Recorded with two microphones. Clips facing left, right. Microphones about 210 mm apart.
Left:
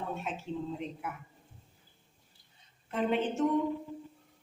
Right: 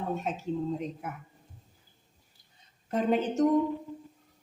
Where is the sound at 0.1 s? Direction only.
40° right (ahead or behind).